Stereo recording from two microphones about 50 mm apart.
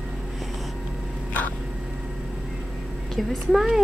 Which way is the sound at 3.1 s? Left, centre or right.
Centre.